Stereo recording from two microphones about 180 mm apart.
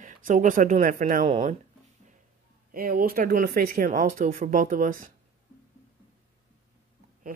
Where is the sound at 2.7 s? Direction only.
55° right (ahead or behind).